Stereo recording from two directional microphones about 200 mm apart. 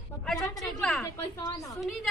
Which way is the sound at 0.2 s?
Centre (ahead or behind).